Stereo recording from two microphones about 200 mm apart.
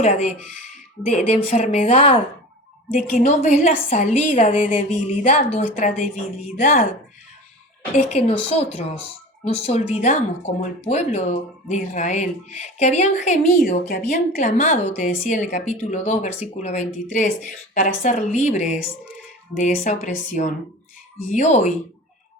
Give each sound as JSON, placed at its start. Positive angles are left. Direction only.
{"t": 0.0, "sound": "a woman's voice", "side_deg": 35}
{"t": 7.9, "sound": "a woman's voice", "side_deg": 35}
{"t": 13.7, "sound": "a woman's voice", "side_deg": 50}